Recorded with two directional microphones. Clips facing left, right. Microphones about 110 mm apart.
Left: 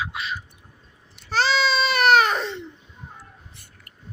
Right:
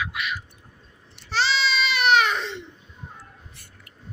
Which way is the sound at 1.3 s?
45° left (ahead or behind).